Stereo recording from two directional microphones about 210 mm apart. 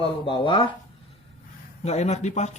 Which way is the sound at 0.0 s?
25° left (ahead or behind).